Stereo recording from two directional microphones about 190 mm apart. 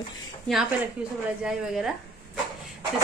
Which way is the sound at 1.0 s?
5° right (ahead or behind).